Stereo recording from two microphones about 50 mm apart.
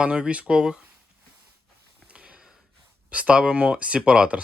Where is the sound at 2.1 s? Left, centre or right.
Right.